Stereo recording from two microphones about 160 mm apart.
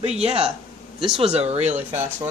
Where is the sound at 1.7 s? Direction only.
10° right (ahead or behind).